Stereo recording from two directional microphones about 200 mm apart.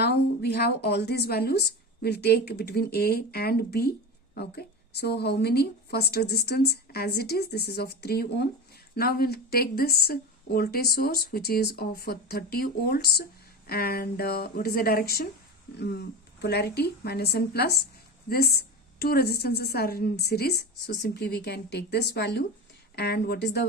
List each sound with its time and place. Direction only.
0.0 s speech: 55° left (ahead or behind)